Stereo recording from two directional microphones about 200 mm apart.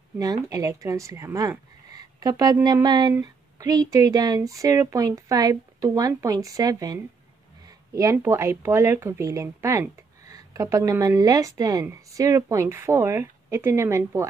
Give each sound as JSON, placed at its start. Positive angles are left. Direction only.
{"t": 0.2, "sound": "speech", "side_deg": -15}